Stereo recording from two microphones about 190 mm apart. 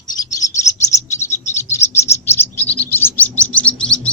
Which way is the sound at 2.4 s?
10° left (ahead or behind).